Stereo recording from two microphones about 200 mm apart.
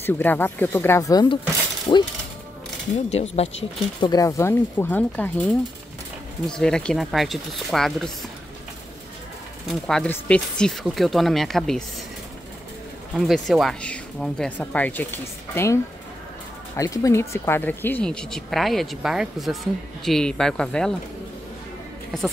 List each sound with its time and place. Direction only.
0.0 s speech: 10° left (ahead or behind)
3.1 s speech: 30° left (ahead or behind)
4.0 s speech: 20° left (ahead or behind); by 8.1 s centre (ahead or behind)
9.7 s speech: centre (ahead or behind)
13.1 s speech: centre (ahead or behind)
22.1 s speech: centre (ahead or behind)